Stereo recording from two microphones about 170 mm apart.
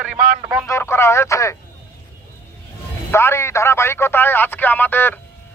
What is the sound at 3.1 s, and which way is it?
Speech, 15° left (ahead or behind).